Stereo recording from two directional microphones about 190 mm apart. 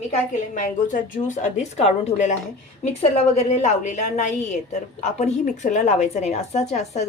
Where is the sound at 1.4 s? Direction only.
40° left (ahead or behind).